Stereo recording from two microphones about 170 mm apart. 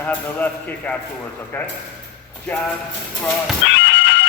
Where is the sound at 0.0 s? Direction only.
10° left (ahead or behind).